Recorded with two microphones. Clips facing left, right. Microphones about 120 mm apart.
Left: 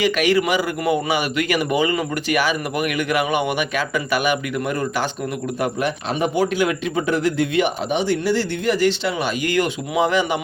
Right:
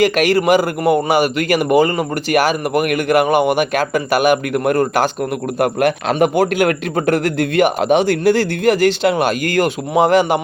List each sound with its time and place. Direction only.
0.0 s a man's voice: 45° right (ahead or behind); by 6.3 s 70° right (ahead or behind)
6.3 s a man's voice: 55° right (ahead or behind)
7.8 s a man's voice: 90° right
8.2 s a man's voice: 50° right (ahead or behind)
9.6 s a man's voice: 45° right (ahead or behind)